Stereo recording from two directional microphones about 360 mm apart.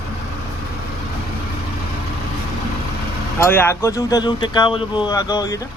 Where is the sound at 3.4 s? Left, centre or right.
Centre.